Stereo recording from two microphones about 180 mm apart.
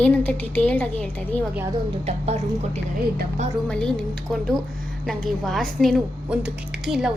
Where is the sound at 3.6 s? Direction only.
5° left (ahead or behind).